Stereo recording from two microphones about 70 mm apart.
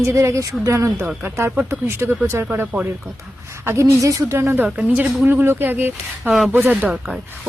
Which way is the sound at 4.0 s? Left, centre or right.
Right.